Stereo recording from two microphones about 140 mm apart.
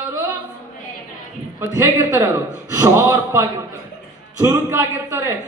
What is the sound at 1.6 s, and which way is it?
A man's voice, 20° right (ahead or behind).